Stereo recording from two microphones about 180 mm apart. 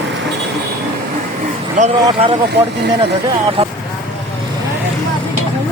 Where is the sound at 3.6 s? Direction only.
30° right (ahead or behind).